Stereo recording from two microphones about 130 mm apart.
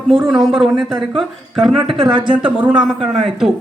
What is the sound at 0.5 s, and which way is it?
A man's voice, centre (ahead or behind).